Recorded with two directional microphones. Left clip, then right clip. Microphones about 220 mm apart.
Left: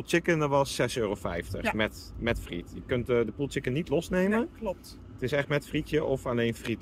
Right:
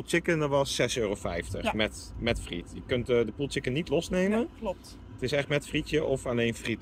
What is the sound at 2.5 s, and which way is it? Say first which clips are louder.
Speech: even; 85° left.